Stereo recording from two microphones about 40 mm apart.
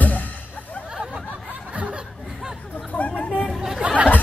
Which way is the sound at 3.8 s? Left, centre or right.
Right.